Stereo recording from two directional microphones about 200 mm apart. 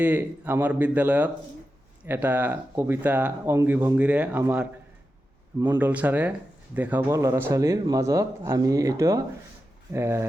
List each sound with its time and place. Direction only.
0.0 s speech: 10° right (ahead or behind)